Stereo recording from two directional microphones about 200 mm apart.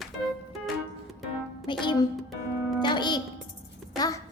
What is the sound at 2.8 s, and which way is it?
Music, 20° left (ahead or behind).